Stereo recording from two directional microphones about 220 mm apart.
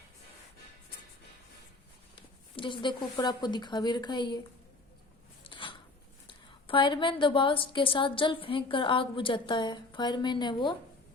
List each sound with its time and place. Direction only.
2.6 s a woman's voice: 20° left (ahead or behind)
5.4 s a sound: 20° left (ahead or behind)
6.2 s a woman's voice: 20° left (ahead or behind)